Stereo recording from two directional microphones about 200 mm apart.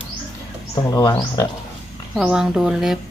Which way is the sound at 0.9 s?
15° left (ahead or behind).